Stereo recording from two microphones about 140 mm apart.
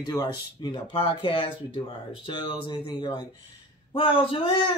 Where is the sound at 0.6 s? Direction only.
35° left (ahead or behind).